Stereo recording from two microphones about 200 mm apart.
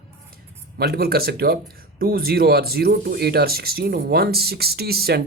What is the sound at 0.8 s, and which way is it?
Speech, 50° right (ahead or behind).